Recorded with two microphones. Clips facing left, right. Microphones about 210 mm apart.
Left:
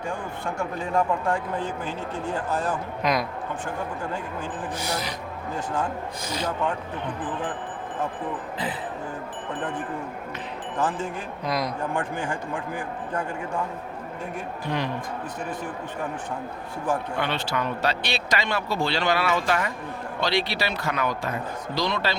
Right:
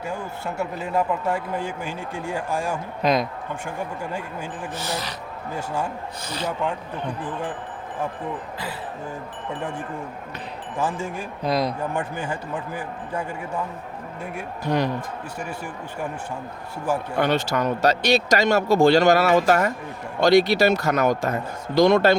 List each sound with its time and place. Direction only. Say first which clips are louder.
0.1 s speech: right 1 dB; 5° right (ahead or behind)
3.0 s a woman's voice: right 4 dB; 25° right (ahead or behind)
4.8 s speech: right 1 dB; 15° left (ahead or behind)
5.5 s speech: right 1 dB; 10° right (ahead or behind)
6.2 s speech: even; 10° left (ahead or behind)
10.8 s speech: right 1 dB; 10° right (ahead or behind)
11.4 s a woman's voice: right 5 dB; 30° right (ahead or behind)
11.8 s speech: right 1 dB; 10° right (ahead or behind)
14.7 s speech: right 6 dB; 50° right (ahead or behind)
17.2 s speech: right 6 dB; 45° right (ahead or behind)